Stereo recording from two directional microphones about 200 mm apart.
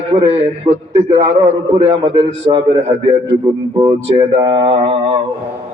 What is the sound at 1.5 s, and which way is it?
Speech, 30° right (ahead or behind).